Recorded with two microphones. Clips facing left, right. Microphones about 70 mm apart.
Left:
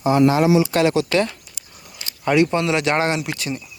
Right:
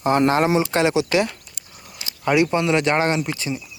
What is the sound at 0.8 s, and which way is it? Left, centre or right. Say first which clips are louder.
Speech: left 1 dB; centre.